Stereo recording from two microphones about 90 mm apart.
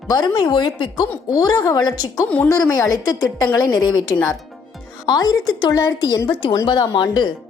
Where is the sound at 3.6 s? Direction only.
55° left (ahead or behind).